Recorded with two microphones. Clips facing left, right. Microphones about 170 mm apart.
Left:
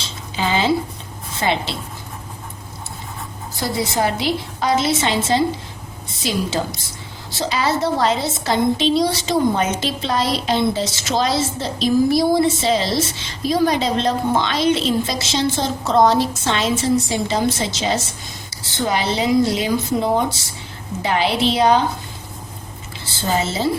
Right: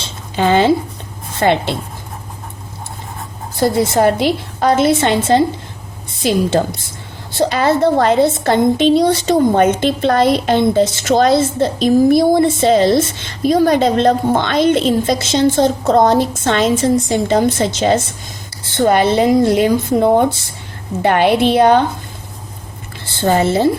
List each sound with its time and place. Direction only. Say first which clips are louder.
0.3 s a sound: right 7 dB; 50° right (ahead or behind)
1.4 s a woman's voice: right 7 dB; 55° right (ahead or behind)
3.6 s a woman's voice: right 8 dB; 50° right (ahead or behind)
7.3 s a woman's voice: right 7 dB; 55° right (ahead or behind)
23.2 s a woman's voice: right 7 dB; 60° right (ahead or behind)